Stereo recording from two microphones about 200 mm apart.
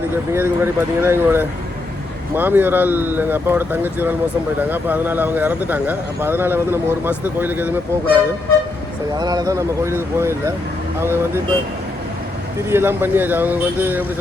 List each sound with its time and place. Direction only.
0.3 s speech: 10° right (ahead or behind)
12.6 s speech: 10° right (ahead or behind)